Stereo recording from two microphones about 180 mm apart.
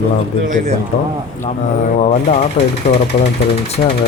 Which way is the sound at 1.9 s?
40° left (ahead or behind).